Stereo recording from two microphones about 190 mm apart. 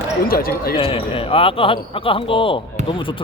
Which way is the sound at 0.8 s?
30° left (ahead or behind).